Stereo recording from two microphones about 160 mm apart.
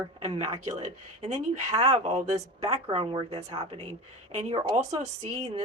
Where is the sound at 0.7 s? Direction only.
40° right (ahead or behind).